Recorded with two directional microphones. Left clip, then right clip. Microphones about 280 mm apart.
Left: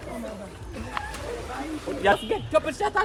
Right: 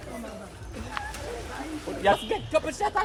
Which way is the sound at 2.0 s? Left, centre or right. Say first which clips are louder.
Left 1 dB; right.